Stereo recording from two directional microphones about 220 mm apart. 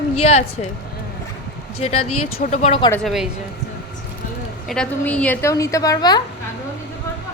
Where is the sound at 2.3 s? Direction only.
35° left (ahead or behind).